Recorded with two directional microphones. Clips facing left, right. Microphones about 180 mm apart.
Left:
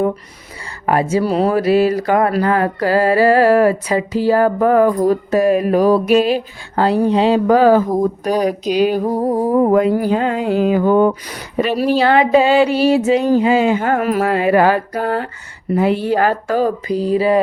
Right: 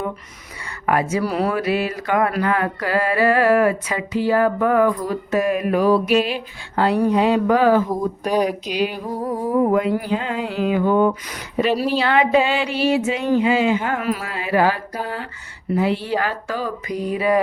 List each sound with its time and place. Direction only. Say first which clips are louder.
0.9 s speech: left 4 dB; 30° left (ahead or behind); by 16.7 s 45° left (ahead or behind)
16.9 s speech: left 3 dB; 30° left (ahead or behind)